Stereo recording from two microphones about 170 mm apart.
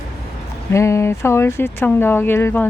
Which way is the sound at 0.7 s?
15° left (ahead or behind).